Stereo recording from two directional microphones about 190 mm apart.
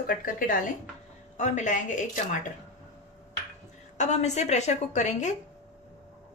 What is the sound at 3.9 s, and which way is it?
Speech, 35° left (ahead or behind).